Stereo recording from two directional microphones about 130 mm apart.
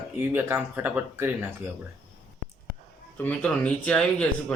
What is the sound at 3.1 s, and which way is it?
Speech, 10° left (ahead or behind).